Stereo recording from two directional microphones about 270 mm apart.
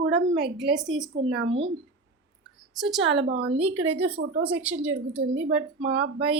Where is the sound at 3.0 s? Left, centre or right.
Right.